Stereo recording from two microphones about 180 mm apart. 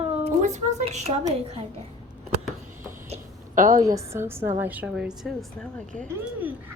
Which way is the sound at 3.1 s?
50° right (ahead or behind).